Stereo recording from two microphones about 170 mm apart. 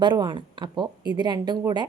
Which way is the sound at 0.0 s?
25° right (ahead or behind).